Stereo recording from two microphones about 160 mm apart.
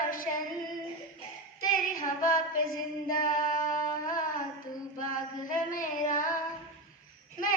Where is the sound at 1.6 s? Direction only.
60° left (ahead or behind).